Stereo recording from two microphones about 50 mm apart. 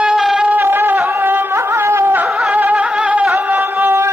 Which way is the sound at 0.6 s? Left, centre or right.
Right.